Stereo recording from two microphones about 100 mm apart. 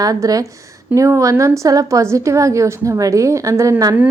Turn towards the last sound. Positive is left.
turn(degrees=-35)  # may be behind; listen again after turning